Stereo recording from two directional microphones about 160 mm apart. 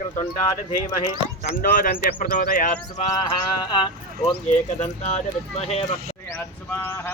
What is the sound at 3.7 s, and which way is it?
Speech, 30° left (ahead or behind).